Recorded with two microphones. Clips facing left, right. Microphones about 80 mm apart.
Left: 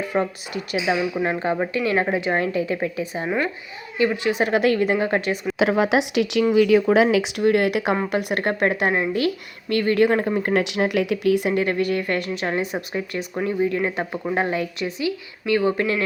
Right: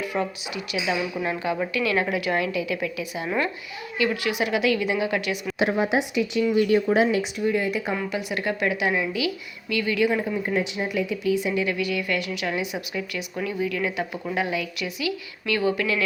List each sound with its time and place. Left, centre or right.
0.0 s a woman's voice: left
0.9 s a woman's voice: left
5.7 s speech: left
8.1 s a woman's voice: left